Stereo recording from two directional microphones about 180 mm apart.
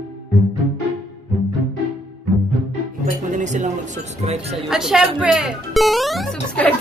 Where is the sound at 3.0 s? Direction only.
45° right (ahead or behind).